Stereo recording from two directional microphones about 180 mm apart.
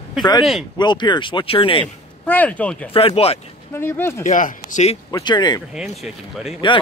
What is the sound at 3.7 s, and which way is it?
Speech, 15° left (ahead or behind).